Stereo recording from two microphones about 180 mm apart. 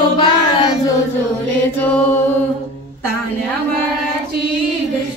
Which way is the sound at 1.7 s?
10° left (ahead or behind).